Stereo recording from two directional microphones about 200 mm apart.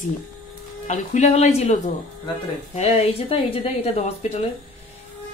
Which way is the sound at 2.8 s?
30° left (ahead or behind).